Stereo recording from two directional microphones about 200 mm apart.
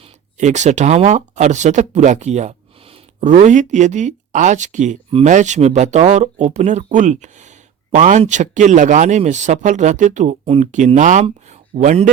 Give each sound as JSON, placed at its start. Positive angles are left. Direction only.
{"t": 0.3, "sound": "speech", "side_deg": -35}